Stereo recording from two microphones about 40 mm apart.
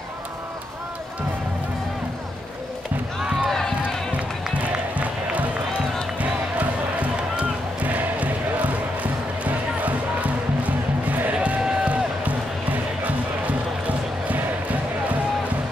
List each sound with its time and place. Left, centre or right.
3.4 s crowd: centre
4.9 s music: right
6.6 s music: right